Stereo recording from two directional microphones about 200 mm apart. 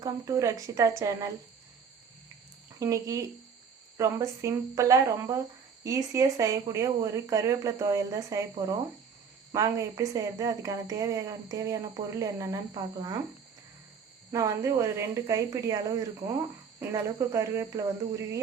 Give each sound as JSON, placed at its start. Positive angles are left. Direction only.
{"t": 0.0, "sound": "a woman's voice", "side_deg": -15}
{"t": 2.7, "sound": "a woman's voice", "side_deg": -15}
{"t": 14.3, "sound": "a woman's voice", "side_deg": -15}